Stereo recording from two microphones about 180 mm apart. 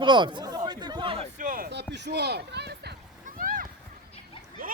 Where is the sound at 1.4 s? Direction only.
50° right (ahead or behind).